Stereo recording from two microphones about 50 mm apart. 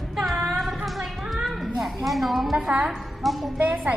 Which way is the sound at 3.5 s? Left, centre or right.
Right.